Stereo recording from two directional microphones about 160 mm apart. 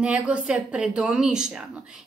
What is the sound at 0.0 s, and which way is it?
A woman's voice, 5° right (ahead or behind).